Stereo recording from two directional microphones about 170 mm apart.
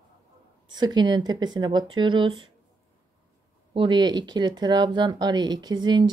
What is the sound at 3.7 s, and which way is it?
Speech, 25° right (ahead or behind).